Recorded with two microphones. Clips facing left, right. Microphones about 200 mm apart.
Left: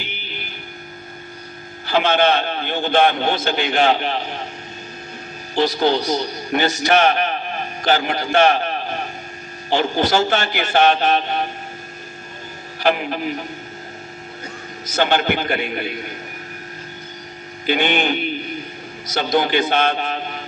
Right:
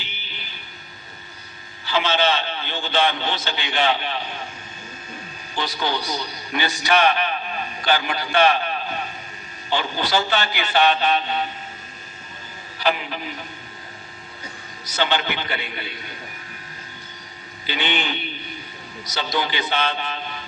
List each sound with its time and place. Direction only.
1.9 s a man's voice: 55° left (ahead or behind)
5.5 s a man's voice: 45° left (ahead or behind)
12.8 s a man's voice: 50° left (ahead or behind)
14.8 s a man's voice: 50° left (ahead or behind)
17.7 s a man's voice: 50° left (ahead or behind)